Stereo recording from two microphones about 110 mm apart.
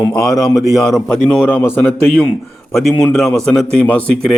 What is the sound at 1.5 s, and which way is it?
Speech, 20° left (ahead or behind).